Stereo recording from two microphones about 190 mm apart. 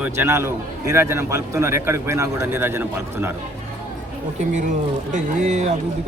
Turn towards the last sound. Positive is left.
turn(degrees=-40)  # may be behind; listen again after turning